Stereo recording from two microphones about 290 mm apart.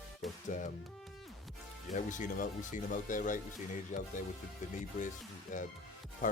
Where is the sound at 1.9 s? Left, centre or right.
Left.